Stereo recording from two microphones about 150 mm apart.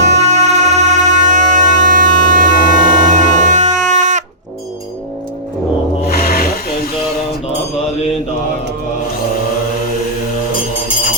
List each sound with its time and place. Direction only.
0.0 s music: 50° right (ahead or behind)
6.1 s rub: 75° left (ahead or behind)